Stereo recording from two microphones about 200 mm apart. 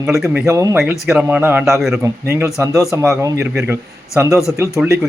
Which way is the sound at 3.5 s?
5° right (ahead or behind).